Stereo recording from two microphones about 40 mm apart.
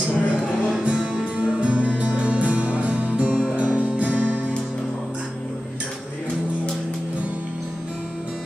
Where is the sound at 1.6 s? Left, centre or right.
Right.